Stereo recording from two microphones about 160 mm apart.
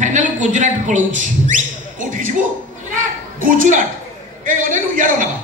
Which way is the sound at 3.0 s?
60° right (ahead or behind).